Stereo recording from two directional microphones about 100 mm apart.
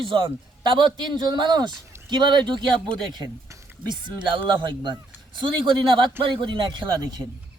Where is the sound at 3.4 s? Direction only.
30° right (ahead or behind).